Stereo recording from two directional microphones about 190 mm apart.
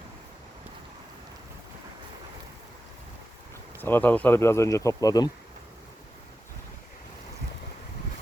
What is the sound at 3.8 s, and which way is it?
Speech, 10° left (ahead or behind).